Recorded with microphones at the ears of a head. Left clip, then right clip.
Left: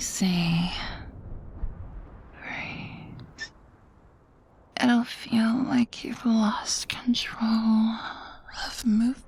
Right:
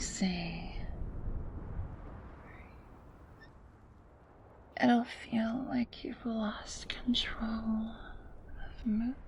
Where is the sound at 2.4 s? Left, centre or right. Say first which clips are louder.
Left 19 dB; left.